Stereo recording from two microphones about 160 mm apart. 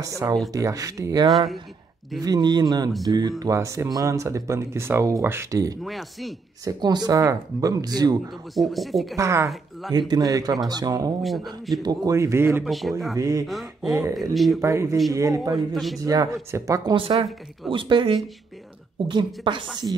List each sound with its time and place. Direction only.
0.0 s speech: 20° right (ahead or behind)
5.9 s speech: centre (ahead or behind)
6.6 s speech: 25° right (ahead or behind)
8.5 s speech: centre (ahead or behind)
9.1 s speech: 20° right (ahead or behind)
11.2 s speech: centre (ahead or behind)
11.8 s speech: 25° right (ahead or behind)
12.6 s speech: centre (ahead or behind)
13.1 s speech: 20° right (ahead or behind)
13.5 s speech: centre (ahead or behind)
14.6 s speech: 15° right (ahead or behind)
15.7 s speech: centre (ahead or behind)
16.0 s speech: 20° right (ahead or behind)
16.9 s speech: 35° right (ahead or behind)